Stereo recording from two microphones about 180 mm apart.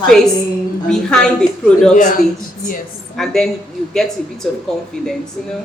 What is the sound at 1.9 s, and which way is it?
Speech, 45° left (ahead or behind).